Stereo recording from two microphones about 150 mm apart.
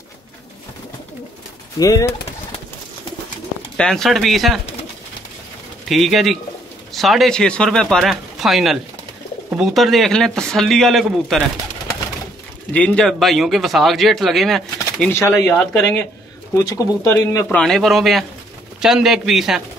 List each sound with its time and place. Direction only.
1.8 s speech: 20° left (ahead or behind)
3.7 s speech: 5° left (ahead or behind)
5.9 s speech: centre (ahead or behind)
12.7 s speech: 5° left (ahead or behind)
15.0 s speech: 15° left (ahead or behind)
17.5 s speech: 5° left (ahead or behind)